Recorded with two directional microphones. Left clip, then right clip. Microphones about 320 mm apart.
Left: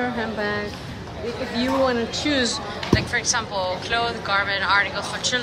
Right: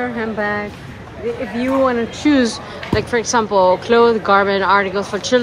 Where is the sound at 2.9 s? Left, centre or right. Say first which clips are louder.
Right 6 dB; centre.